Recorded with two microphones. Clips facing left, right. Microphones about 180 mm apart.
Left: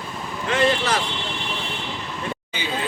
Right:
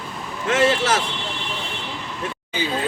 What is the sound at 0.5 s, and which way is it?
Vehicle, 90° right.